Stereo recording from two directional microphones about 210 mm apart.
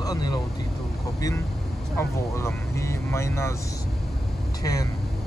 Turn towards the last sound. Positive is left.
turn(degrees=15)  # may be behind; listen again after turning